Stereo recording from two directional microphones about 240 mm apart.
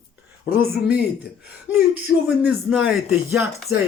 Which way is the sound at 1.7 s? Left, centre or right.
Centre.